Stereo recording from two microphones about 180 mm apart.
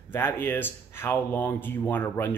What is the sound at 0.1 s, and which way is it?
Speech, 10° left (ahead or behind).